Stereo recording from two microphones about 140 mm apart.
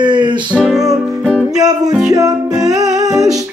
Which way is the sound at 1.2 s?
5° left (ahead or behind).